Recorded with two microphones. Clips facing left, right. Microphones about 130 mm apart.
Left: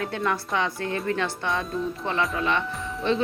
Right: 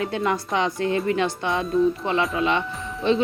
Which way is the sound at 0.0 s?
20° right (ahead or behind).